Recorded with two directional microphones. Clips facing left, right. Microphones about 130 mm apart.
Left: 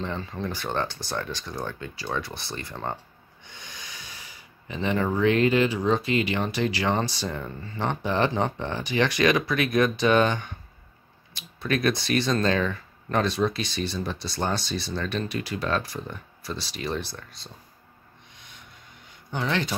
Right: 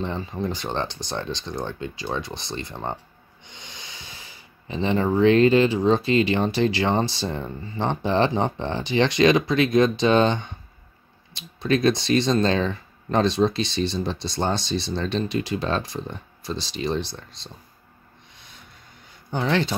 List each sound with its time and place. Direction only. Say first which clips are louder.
0.0 s speech: right 3 dB; 20° right (ahead or behind)
18.3 s a sound: right 1 dB; 35° right (ahead or behind)
19.3 s speech: right 4 dB; 35° right (ahead or behind)